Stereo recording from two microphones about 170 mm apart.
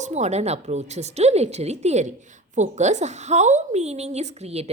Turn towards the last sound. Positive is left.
turn(degrees=-40)  # may be behind; listen again after turning